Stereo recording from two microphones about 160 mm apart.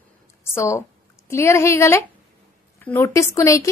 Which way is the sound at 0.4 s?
20° left (ahead or behind).